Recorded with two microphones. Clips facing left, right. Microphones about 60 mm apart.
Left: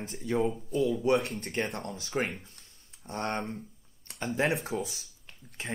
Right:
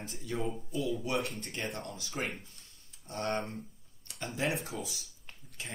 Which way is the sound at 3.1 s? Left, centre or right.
Left.